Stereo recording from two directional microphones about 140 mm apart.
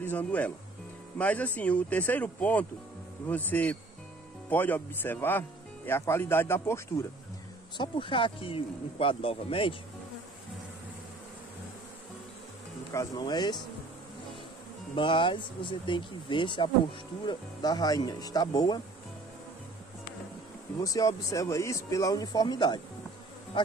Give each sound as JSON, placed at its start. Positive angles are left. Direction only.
{"t": 0.0, "sound": "speech", "side_deg": 10}
{"t": 7.7, "sound": "speech", "side_deg": 35}
{"t": 13.2, "sound": "speech", "side_deg": 30}
{"t": 15.0, "sound": "speech", "side_deg": 35}
{"t": 20.8, "sound": "speech", "side_deg": 25}